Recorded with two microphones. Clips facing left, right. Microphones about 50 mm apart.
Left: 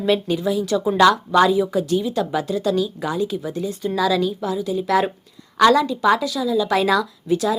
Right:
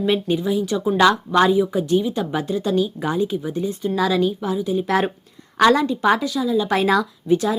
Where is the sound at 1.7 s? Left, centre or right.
Right.